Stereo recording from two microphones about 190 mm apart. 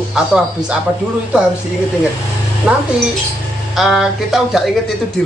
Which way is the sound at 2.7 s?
5° right (ahead or behind).